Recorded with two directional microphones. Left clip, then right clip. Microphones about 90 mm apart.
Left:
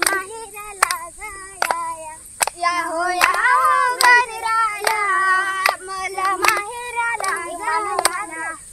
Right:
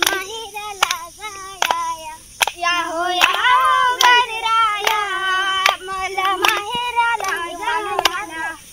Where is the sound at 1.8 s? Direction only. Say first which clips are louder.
Right 3 dB; 55° left (ahead or behind).